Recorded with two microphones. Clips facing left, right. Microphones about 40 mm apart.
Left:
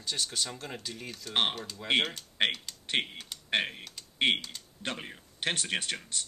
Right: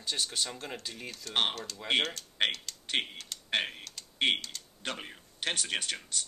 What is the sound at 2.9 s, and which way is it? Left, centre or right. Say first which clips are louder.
Typing: left 1 dB; centre.